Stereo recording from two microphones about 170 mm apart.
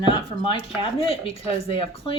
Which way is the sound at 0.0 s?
30° left (ahead or behind).